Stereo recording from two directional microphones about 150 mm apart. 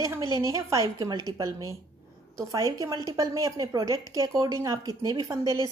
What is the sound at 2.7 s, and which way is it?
A woman's voice, 25° right (ahead or behind).